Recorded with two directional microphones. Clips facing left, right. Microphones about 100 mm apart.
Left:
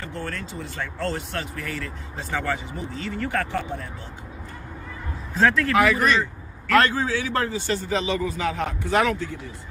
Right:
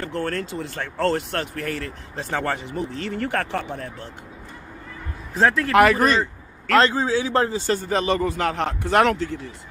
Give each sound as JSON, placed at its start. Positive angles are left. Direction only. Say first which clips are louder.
{"t": 0.0, "sound": "speech", "louder": "right 6 dB", "side_deg": -55}
{"t": 5.4, "sound": "speech", "louder": "right 1 dB", "side_deg": -20}
{"t": 5.7, "sound": "speech", "louder": "right 4 dB", "side_deg": -60}
{"t": 5.9, "sound": "speech", "louder": "right 2 dB", "side_deg": -40}
{"t": 6.7, "sound": "a man's voice", "louder": "right 2 dB", "side_deg": -25}